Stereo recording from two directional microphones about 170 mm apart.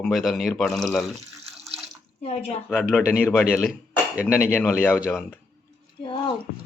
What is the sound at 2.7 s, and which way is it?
Speech, 5° left (ahead or behind).